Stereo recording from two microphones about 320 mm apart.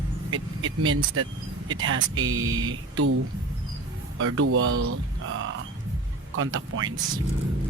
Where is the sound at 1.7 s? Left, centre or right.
Right.